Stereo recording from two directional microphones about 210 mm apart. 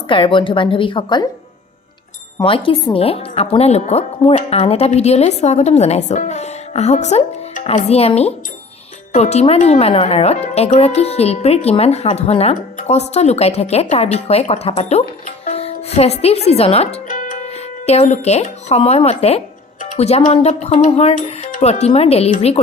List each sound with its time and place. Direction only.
0.1 s speech: 25° left (ahead or behind)
2.4 s a woman's voice: 25° left (ahead or behind)